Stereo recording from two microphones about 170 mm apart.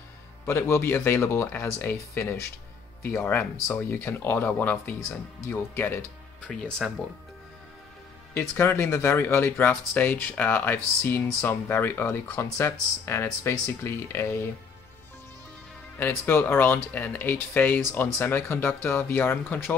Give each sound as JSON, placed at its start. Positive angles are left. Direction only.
{"t": 0.5, "sound": "speech", "side_deg": 15}
{"t": 6.8, "sound": "speech", "side_deg": -5}
{"t": 8.4, "sound": "speech", "side_deg": 15}
{"t": 16.0, "sound": "speech", "side_deg": 10}